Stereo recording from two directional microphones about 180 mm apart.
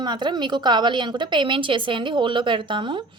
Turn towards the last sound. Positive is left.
turn(degrees=-25)  # may be behind; listen again after turning